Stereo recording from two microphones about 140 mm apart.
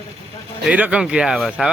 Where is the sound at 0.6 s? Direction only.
10° right (ahead or behind).